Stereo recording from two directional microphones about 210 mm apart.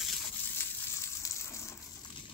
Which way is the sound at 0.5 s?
15° left (ahead or behind).